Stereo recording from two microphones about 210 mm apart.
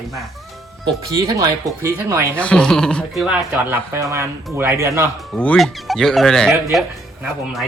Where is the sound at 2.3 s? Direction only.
5° left (ahead or behind).